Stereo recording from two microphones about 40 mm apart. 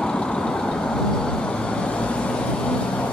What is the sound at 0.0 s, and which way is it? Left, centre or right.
Vehicle, left.